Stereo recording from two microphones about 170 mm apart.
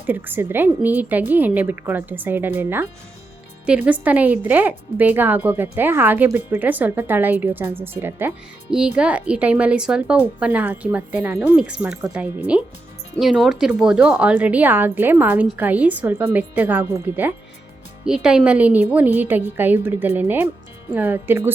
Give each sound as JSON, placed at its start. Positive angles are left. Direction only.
{"t": 0.0, "sound": "a woman's voice", "side_deg": -10}